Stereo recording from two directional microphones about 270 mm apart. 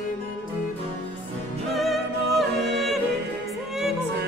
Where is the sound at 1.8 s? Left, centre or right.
Centre.